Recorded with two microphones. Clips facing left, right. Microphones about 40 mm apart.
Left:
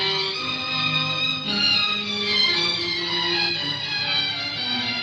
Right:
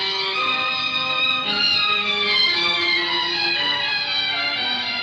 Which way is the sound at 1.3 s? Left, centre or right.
Right.